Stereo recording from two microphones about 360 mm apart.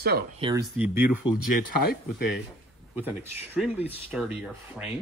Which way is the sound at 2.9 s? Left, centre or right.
Centre.